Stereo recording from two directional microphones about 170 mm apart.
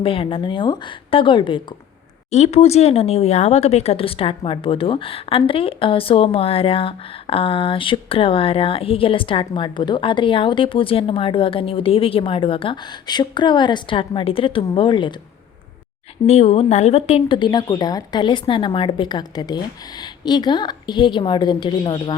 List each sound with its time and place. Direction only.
0.0 s speech: 30° left (ahead or behind)
16.2 s speech: 40° left (ahead or behind)